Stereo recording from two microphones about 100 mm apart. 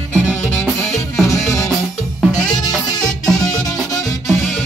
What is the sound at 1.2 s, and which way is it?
Music, 35° left (ahead or behind).